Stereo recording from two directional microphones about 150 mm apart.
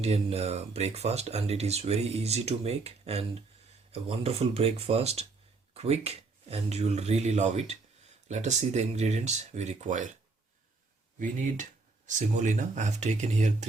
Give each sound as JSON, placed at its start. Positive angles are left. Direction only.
{"t": 0.0, "sound": "speech", "side_deg": -45}
{"t": 12.0, "sound": "speech", "side_deg": -55}